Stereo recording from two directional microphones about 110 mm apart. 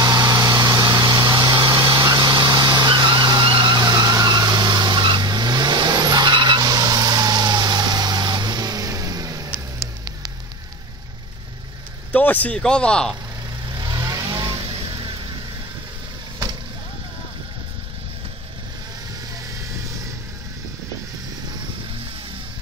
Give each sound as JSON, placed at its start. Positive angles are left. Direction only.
{"t": 0.0, "sound": "a sound", "side_deg": -35}
{"t": 12.1, "sound": "speech", "side_deg": 15}
{"t": 13.7, "sound": "vehicle", "side_deg": -35}
{"t": 14.5, "sound": "vehicle", "side_deg": -55}